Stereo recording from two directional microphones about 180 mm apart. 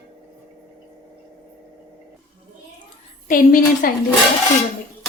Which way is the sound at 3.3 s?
50° left (ahead or behind).